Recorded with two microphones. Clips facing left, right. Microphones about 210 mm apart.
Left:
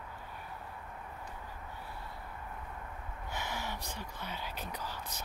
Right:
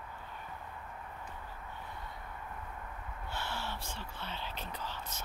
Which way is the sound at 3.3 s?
15° left (ahead or behind).